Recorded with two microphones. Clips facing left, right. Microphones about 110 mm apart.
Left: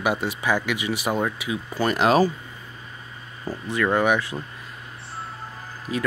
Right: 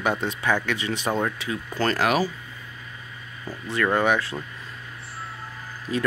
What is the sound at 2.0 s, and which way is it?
Speech, 40° left (ahead or behind).